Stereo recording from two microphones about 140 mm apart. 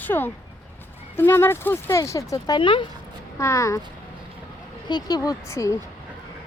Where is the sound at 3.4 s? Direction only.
20° left (ahead or behind).